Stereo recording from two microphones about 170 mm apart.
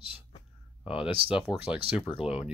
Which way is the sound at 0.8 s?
30° left (ahead or behind).